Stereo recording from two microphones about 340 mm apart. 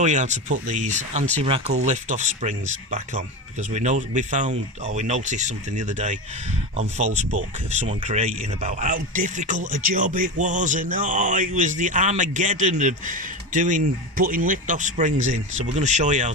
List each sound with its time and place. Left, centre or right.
0.0 s speech: right